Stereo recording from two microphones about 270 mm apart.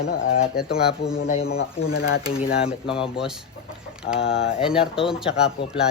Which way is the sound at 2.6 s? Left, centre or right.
Left.